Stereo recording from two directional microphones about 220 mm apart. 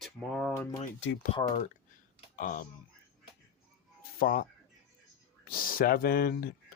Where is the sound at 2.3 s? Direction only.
40° left (ahead or behind).